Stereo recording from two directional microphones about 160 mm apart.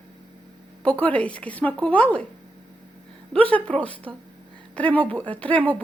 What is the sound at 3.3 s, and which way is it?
Speech, 10° left (ahead or behind).